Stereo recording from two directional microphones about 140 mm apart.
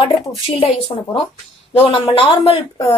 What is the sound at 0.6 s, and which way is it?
A woman's voice, 45° left (ahead or behind).